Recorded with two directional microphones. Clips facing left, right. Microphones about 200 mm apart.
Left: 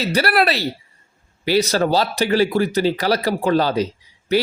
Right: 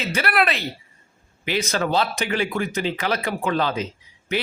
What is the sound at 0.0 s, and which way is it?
A man's voice, 35° left (ahead or behind).